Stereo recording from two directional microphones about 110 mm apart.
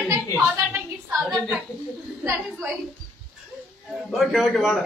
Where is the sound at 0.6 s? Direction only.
15° right (ahead or behind).